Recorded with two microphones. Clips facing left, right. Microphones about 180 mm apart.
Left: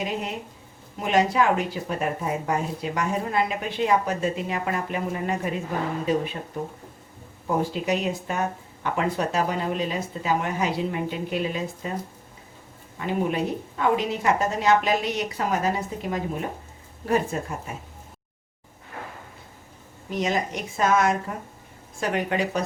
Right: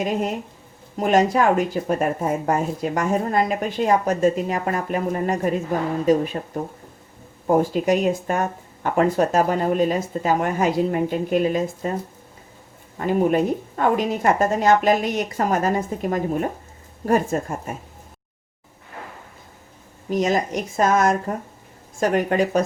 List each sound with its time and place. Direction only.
0.0 s speech: 45° right (ahead or behind)
7.4 s speech: 50° right (ahead or behind)
13.0 s speech: 45° right (ahead or behind)
20.1 s speech: 45° right (ahead or behind)